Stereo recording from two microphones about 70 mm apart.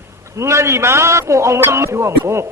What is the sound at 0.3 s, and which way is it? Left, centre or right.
A man's voice, right.